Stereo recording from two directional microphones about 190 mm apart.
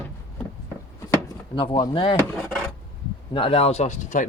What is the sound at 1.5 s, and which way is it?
Speech, 25° left (ahead or behind).